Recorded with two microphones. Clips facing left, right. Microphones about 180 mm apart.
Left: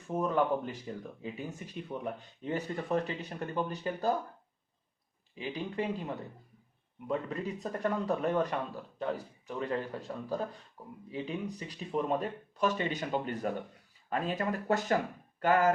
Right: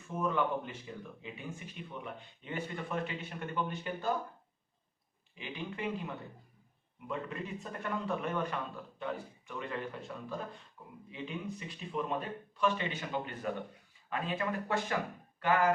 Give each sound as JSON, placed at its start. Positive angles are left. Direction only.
{"t": 0.2, "sound": "speech", "side_deg": 40}
{"t": 5.3, "sound": "speech", "side_deg": 35}
{"t": 7.1, "sound": "speech", "side_deg": 35}